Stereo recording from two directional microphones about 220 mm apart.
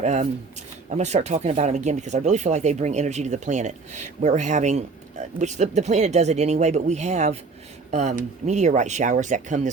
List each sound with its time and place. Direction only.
0.0 s speech: 30° right (ahead or behind)